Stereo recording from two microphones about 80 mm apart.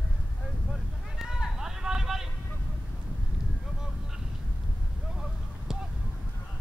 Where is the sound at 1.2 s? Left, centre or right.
Centre.